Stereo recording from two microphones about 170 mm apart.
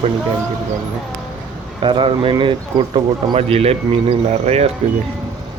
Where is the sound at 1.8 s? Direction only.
30° right (ahead or behind).